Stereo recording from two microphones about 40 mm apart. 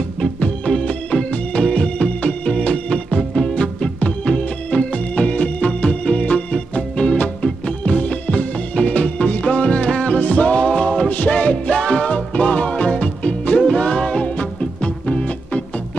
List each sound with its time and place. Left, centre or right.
0.4 s music: left
2.0 s music: left
3.3 s music: centre
4.0 s music: left
10.1 s music: left